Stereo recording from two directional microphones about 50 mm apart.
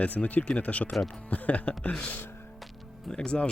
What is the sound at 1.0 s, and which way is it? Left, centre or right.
Speech, centre.